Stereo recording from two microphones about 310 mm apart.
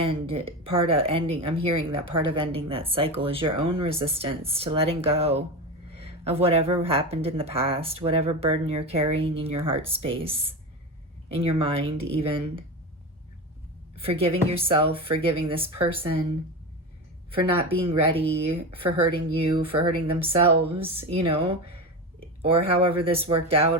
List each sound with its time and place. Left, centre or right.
0.0 s speech: centre
13.9 s speech: centre
17.3 s speech: centre